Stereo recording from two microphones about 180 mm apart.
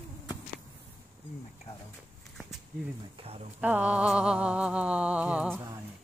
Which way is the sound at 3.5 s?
10° right (ahead or behind).